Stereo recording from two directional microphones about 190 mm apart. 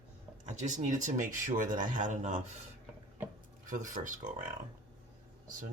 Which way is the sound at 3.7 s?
40° right (ahead or behind).